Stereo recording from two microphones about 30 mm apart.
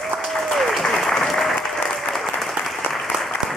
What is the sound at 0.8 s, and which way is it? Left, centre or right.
Applause, centre.